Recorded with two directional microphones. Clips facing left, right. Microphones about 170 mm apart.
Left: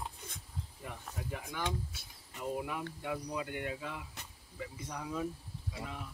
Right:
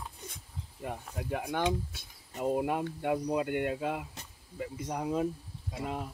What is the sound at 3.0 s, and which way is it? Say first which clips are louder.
Speech: right 9 dB; 60° right (ahead or behind).